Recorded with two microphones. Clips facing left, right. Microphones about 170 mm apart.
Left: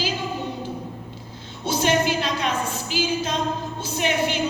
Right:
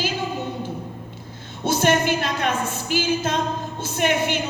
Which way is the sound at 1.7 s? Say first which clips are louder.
Right 2 dB; 55° right (ahead or behind).